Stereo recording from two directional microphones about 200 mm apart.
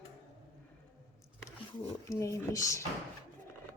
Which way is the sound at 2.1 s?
15° left (ahead or behind).